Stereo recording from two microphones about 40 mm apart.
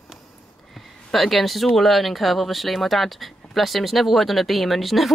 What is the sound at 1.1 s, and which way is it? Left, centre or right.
Speech, centre.